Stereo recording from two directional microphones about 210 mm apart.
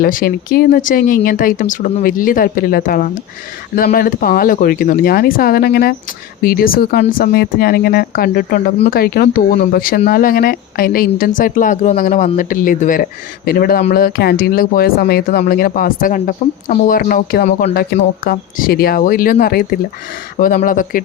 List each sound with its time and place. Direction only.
0.0 s speech: 45° left (ahead or behind)